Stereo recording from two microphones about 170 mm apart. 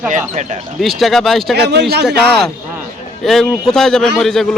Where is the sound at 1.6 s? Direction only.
75° right (ahead or behind).